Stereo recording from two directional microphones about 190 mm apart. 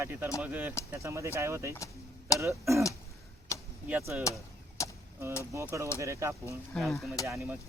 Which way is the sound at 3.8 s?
10° right (ahead or behind).